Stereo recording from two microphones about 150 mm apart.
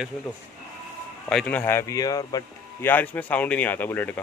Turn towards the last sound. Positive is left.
turn(degrees=15)  # may be behind; listen again after turning